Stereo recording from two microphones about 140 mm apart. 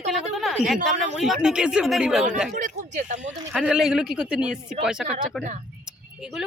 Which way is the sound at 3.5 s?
5° right (ahead or behind).